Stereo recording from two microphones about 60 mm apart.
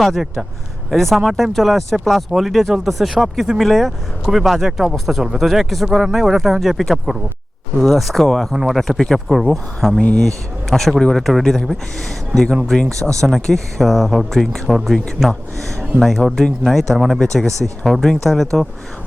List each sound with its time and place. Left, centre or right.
0.0 s speech: centre
13.0 s speech: right
13.2 s speech: centre